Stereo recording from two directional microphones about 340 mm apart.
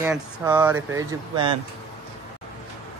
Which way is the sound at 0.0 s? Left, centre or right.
Centre.